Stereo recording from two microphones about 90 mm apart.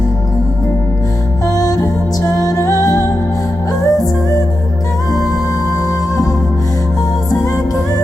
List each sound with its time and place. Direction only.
1.5 s music: 40° left (ahead or behind)